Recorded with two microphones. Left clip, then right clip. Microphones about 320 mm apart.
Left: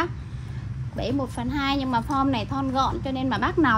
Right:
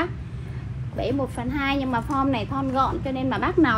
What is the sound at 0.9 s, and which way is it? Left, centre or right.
A woman's voice, left.